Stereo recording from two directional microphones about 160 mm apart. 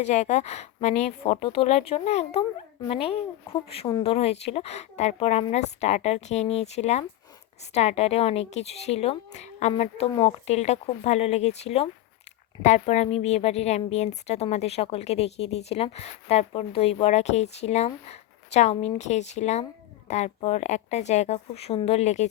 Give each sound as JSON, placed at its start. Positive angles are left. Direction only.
{"t": 0.0, "sound": "a woman's voice", "side_deg": 45}